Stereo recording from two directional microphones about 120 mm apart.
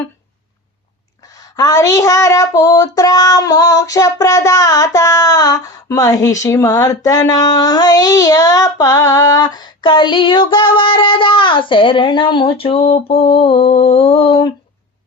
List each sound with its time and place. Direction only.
1.3 s child singing: 30° left (ahead or behind); by 14.5 s 50° left (ahead or behind)